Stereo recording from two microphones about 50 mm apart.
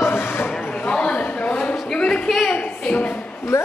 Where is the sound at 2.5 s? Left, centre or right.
Left.